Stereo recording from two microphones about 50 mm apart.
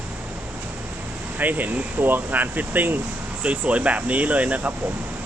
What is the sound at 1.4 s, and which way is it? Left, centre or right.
Speech, right.